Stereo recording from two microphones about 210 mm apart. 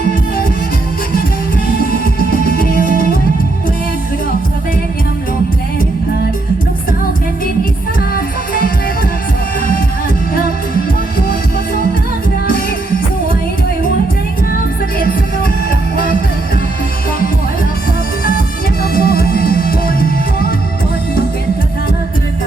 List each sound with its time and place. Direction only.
2.7 s music: 35° right (ahead or behind)
8.1 s music: 45° left (ahead or behind)
18.3 s music: 45° left (ahead or behind)